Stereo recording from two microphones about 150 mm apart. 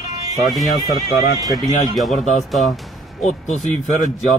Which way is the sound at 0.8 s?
25° right (ahead or behind).